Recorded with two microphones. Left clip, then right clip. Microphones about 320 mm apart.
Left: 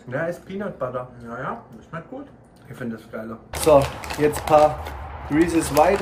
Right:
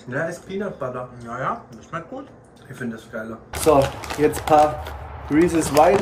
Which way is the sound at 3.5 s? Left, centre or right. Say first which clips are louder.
Left 1 dB; centre.